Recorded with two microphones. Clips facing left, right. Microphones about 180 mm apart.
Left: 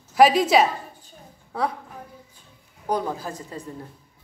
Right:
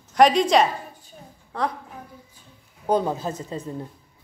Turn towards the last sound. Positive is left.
turn(degrees=-20)  # may be behind; listen again after turning